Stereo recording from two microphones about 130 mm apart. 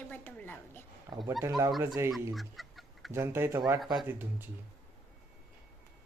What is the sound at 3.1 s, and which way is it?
Speech, 20° right (ahead or behind).